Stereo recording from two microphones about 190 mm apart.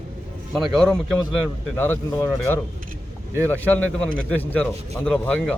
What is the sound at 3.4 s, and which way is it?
Speech, 10° left (ahead or behind).